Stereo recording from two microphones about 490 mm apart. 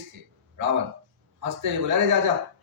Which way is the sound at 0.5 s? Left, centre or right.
Right.